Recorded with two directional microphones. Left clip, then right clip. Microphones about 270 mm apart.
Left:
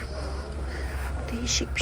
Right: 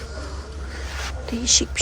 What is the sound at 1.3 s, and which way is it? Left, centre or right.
Whispering, centre.